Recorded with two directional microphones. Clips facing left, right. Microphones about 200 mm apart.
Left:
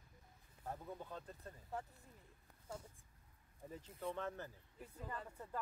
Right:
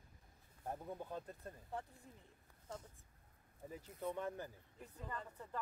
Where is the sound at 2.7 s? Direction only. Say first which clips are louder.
Even; 10° left (ahead or behind).